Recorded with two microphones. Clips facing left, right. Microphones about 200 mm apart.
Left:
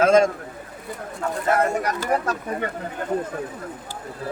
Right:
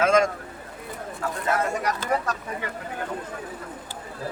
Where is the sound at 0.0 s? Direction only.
35° left (ahead or behind).